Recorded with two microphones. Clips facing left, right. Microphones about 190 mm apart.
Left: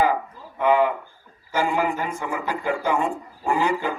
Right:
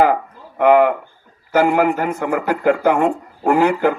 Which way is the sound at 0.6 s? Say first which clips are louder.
Right 7 dB; 65° right (ahead or behind).